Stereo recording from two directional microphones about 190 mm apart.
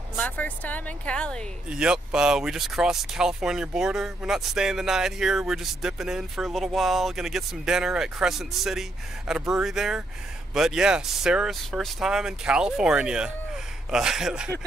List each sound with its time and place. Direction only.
0.1 s a woman's voice: 10° left (ahead or behind)